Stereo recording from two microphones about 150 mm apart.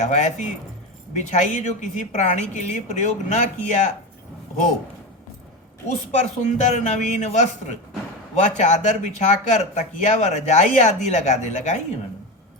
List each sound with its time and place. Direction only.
0.0 s speech: 50° left (ahead or behind)
6.1 s speech: 50° left (ahead or behind)